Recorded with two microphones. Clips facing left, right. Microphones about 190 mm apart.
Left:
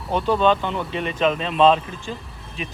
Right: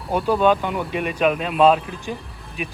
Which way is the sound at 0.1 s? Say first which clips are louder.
Right 1 dB; 10° right (ahead or behind).